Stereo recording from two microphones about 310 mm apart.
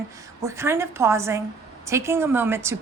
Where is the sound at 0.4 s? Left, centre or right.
Centre.